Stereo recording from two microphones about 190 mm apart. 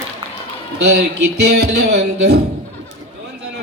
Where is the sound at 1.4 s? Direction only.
60° right (ahead or behind).